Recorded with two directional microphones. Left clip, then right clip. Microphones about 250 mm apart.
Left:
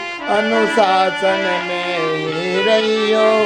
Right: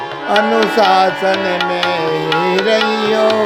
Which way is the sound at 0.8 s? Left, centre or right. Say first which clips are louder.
Right 3 dB; right.